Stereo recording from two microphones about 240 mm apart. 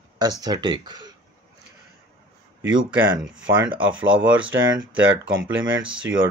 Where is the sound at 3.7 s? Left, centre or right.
Centre.